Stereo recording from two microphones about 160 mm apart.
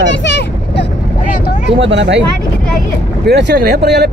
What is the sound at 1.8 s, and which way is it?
Speech, 90° right.